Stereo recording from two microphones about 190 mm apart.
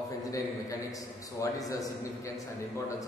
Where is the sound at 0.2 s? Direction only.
15° left (ahead or behind).